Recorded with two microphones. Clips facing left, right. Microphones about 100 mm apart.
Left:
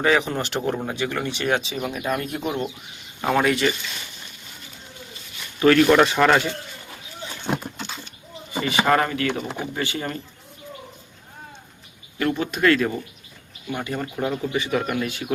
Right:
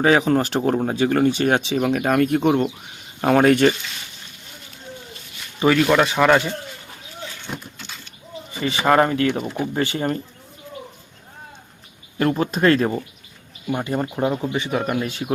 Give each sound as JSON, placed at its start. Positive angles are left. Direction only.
{"t": 0.2, "sound": "speech", "side_deg": -35}
{"t": 1.7, "sound": "speech", "side_deg": -85}
{"t": 3.2, "sound": "speech", "side_deg": -50}
{"t": 5.5, "sound": "speech", "side_deg": -10}
{"t": 7.4, "sound": "a sound", "side_deg": 70}
{"t": 8.8, "sound": "speech", "side_deg": -30}
{"t": 12.2, "sound": "speech", "side_deg": -35}